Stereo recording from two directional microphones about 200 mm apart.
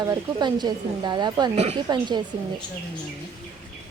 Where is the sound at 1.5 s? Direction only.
35° right (ahead or behind).